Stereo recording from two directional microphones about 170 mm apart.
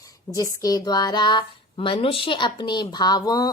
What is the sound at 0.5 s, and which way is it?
A woman's voice, 20° left (ahead or behind).